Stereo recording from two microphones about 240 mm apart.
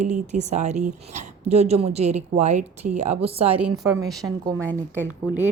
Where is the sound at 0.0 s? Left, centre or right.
Right.